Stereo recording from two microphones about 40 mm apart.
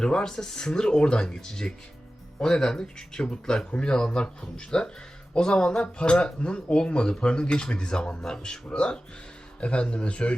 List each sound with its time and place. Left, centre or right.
0.0 s speech: centre
8.7 s speech: left